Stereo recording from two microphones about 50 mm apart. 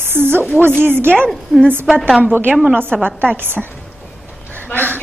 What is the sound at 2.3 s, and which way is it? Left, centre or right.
A woman's voice, right.